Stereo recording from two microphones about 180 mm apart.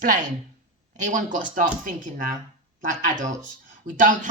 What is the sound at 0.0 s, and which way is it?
Speech, 45° right (ahead or behind).